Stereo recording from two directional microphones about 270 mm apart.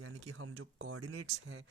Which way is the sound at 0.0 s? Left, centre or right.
Right.